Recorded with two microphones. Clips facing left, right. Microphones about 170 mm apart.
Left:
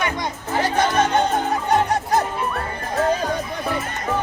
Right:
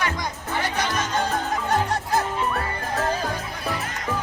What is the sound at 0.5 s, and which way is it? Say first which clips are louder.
Music: left 7 dB; 45° left (ahead or behind).